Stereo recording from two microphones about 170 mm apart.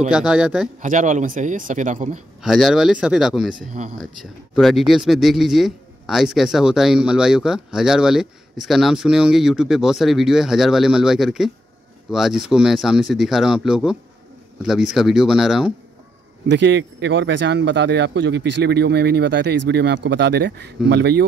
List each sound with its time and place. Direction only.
0.1 s speech: 5° right (ahead or behind)
0.7 s a man's voice: 45° right (ahead or behind)
2.4 s speech: centre (ahead or behind)
3.5 s a man's voice: 50° right (ahead or behind)
4.0 s speech: centre (ahead or behind)
16.4 s speech: 90° right